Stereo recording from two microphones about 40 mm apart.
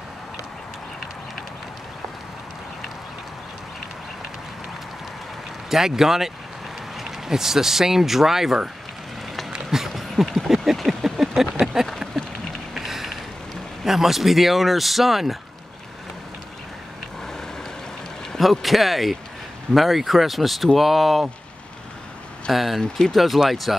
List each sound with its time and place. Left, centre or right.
5.7 s speech: centre
9.7 s a sound: centre
13.8 s speech: centre
18.4 s speech: centre
22.5 s speech: centre
22.8 s speech: centre
23.1 s speech: centre